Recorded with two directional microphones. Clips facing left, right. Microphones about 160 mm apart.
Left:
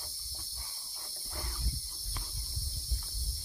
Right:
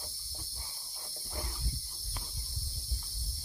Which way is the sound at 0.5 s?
25° right (ahead or behind).